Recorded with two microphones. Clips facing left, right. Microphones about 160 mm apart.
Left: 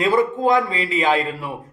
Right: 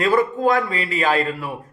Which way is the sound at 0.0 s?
20° left (ahead or behind).